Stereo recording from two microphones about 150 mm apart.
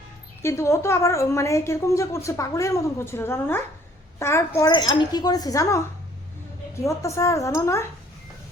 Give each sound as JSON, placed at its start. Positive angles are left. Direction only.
{"t": 0.4, "sound": "a woman's voice", "side_deg": 20}
{"t": 4.7, "sound": "a woman's voice", "side_deg": 30}
{"t": 6.8, "sound": "a woman's voice", "side_deg": 20}